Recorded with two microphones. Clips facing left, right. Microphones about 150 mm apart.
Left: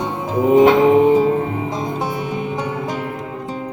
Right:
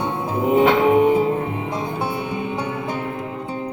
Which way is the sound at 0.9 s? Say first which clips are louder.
Left 3 dB; 35° left (ahead or behind).